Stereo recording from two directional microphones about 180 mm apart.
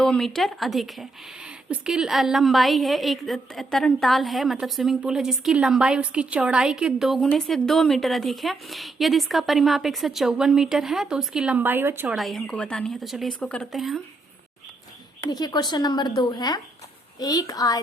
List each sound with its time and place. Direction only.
0.0 s a woman's voice: centre (ahead or behind)
12.1 s a woman's voice: centre (ahead or behind)
15.3 s speech: 20° left (ahead or behind)